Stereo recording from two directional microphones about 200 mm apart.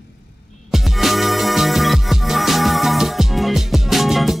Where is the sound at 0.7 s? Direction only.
Centre (ahead or behind).